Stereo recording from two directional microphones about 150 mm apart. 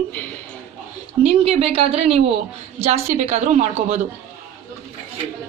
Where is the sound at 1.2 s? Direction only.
40° right (ahead or behind).